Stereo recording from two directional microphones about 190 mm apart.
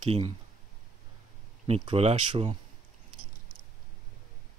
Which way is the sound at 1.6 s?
30° right (ahead or behind).